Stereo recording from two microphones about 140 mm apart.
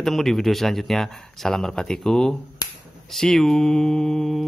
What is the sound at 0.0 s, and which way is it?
Speech, centre (ahead or behind).